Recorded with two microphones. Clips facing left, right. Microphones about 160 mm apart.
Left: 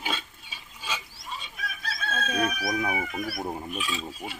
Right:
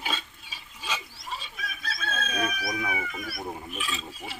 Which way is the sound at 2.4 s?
40° left (ahead or behind).